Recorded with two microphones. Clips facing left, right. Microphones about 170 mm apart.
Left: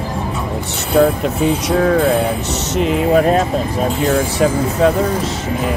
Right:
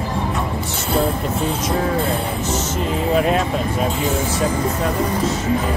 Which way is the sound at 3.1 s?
40° left (ahead or behind).